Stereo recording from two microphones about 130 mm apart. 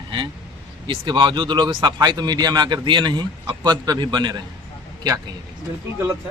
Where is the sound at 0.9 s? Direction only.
35° right (ahead or behind).